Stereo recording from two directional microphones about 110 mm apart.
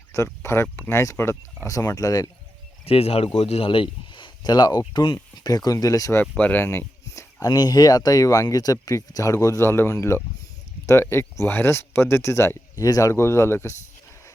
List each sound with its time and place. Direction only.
0.3 s speech: 20° left (ahead or behind)
2.8 s speech: 65° left (ahead or behind); by 6.2 s 30° left (ahead or behind)
6.3 s a sound: 15° left (ahead or behind)
7.5 s speech: 40° left (ahead or behind); by 13.7 s 25° left (ahead or behind)